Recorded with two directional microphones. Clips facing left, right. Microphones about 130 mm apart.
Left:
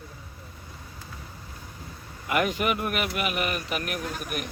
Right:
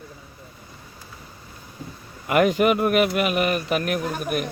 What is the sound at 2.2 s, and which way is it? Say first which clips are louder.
Speech: right 7 dB; 60° right (ahead or behind).